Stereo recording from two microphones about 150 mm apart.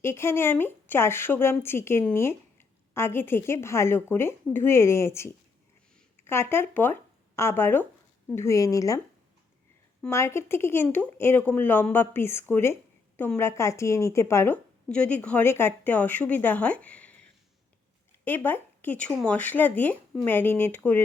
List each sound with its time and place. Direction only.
0.0 s a woman's voice: 15° left (ahead or behind)
10.1 s a woman's voice: 15° left (ahead or behind)
18.3 s a woman's voice: 10° left (ahead or behind)